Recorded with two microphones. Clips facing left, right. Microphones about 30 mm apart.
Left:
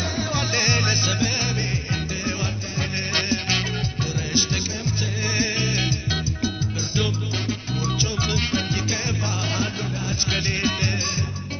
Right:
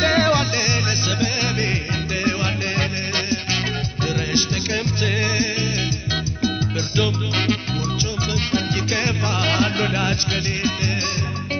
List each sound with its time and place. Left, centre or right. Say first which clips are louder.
0.0 s music: right 10 dB; right
0.6 s music: even; centre
1.4 s music: right 4 dB; right
3.2 s music: even; centre
4.3 s music: even; right
5.4 s music: right 1 dB; centre
8.9 s music: right 5 dB; right
10.3 s music: right 1 dB; centre